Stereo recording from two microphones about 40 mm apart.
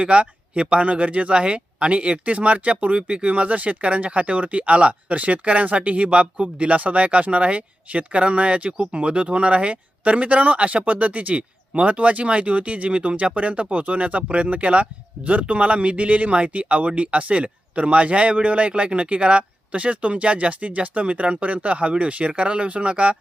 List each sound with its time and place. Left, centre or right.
0.0 s speech: right